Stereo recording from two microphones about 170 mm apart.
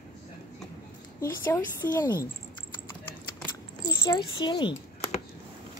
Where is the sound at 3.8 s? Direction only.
25° left (ahead or behind).